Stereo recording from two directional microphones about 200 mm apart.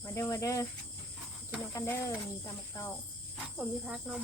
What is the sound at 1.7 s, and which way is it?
Cricket, 15° left (ahead or behind).